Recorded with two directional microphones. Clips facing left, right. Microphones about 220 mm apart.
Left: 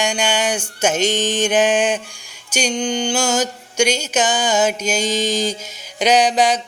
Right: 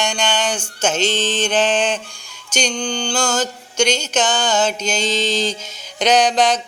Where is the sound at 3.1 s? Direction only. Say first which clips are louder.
Left 1 dB; 10° left (ahead or behind).